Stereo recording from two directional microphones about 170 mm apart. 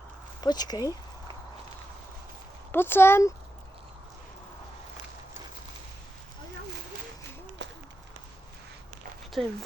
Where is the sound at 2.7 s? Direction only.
15° left (ahead or behind).